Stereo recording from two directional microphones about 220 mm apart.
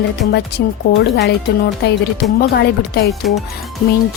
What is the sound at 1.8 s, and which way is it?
Speech, 45° left (ahead or behind).